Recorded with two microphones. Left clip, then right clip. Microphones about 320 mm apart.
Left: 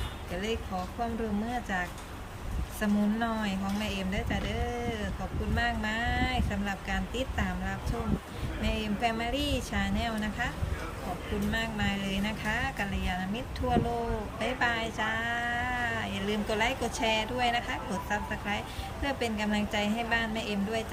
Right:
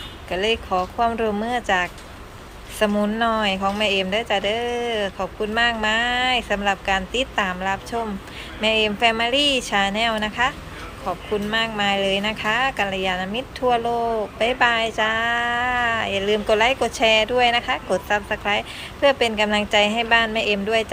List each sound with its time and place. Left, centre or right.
0.3 s a woman's voice: centre
11.5 s a woman's voice: centre